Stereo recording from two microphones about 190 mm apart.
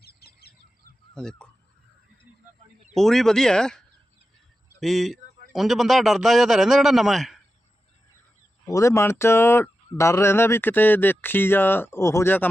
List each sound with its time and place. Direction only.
0.0 s bird: 55° left (ahead or behind)
1.1 s goose: 5° left (ahead or behind)
2.9 s a man's voice: centre (ahead or behind)
8.6 s speech: 15° left (ahead or behind)